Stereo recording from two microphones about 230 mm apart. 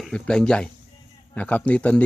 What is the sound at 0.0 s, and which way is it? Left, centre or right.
Speech, centre.